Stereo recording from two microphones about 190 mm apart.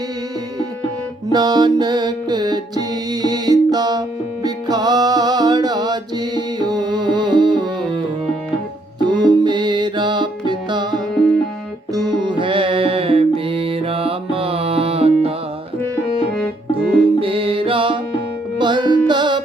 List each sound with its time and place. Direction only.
1.3 s music: 20° right (ahead or behind)
9.0 s music: 20° right (ahead or behind)
16.4 s music: 5° left (ahead or behind)
17.2 s music: 30° right (ahead or behind)